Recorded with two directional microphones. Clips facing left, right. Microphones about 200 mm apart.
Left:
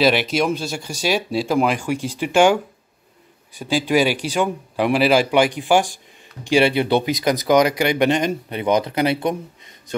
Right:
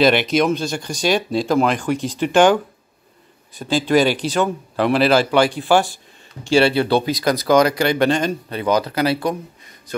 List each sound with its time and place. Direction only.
0.0 s speech: 5° left (ahead or behind); by 10.0 s 25° left (ahead or behind)